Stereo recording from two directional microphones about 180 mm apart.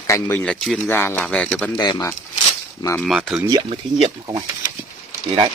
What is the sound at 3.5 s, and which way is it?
Speech, 30° right (ahead or behind).